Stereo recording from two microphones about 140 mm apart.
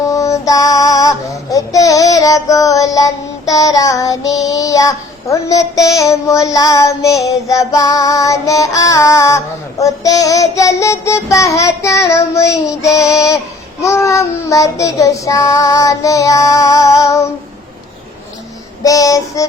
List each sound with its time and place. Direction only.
0.0 s child singing: 25° left (ahead or behind)
18.8 s child singing: 25° left (ahead or behind)